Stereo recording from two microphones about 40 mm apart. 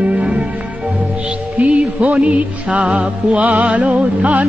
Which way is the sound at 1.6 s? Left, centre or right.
Right.